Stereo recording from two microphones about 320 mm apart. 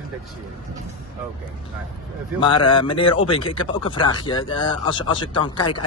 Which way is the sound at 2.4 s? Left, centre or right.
Centre.